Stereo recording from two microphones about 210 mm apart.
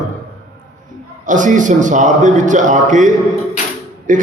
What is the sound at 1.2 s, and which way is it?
A man's voice, 35° right (ahead or behind).